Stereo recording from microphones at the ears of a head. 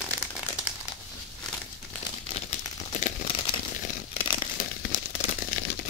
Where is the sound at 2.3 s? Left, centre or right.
Left.